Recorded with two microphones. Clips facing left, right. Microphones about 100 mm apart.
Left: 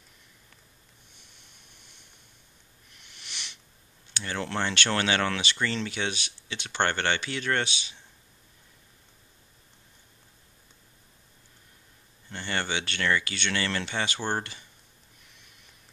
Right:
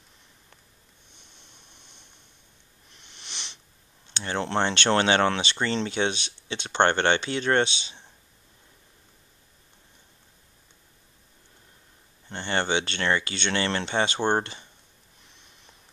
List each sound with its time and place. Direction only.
1.3 s vehicle: 25° right (ahead or behind)
2.9 s sniff: 25° right (ahead or behind)
4.1 s speech: 25° right (ahead or behind)
12.3 s speech: 25° right (ahead or behind)